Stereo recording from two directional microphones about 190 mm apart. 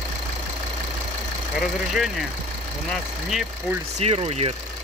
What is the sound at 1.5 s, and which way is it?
Speech, centre (ahead or behind).